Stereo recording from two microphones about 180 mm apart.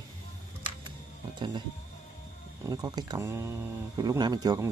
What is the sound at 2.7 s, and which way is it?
Speech, 20° right (ahead or behind).